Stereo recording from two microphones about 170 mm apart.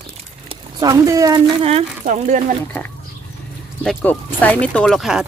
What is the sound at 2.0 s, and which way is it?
Speech, 50° right (ahead or behind).